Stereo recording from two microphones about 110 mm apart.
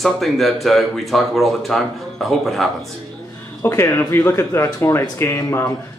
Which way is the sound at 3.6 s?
30° left (ahead or behind).